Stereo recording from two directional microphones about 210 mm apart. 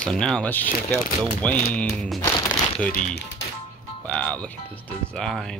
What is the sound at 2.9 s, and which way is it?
Speech, 40° left (ahead or behind).